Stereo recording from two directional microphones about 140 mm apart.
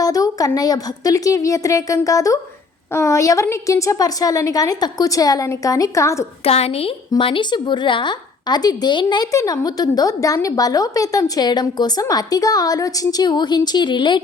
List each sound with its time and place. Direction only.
0.0 s a woman's voice: 25° left (ahead or behind)
6.4 s a woman's voice: 45° left (ahead or behind)